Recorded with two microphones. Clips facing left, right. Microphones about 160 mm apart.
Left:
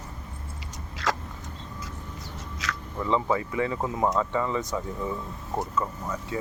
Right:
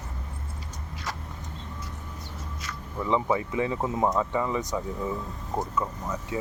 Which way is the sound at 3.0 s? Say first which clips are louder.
Even; 15° right (ahead or behind).